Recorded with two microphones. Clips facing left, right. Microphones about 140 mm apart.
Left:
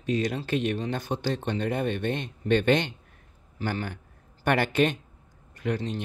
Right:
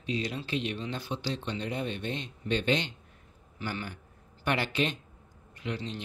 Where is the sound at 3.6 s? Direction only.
40° left (ahead or behind).